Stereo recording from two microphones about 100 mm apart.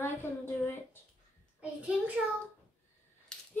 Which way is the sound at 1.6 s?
10° right (ahead or behind).